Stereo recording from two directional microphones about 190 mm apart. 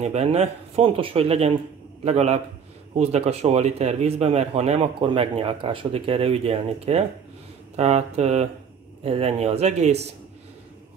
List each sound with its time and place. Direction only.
0.0 s speech: 35° right (ahead or behind)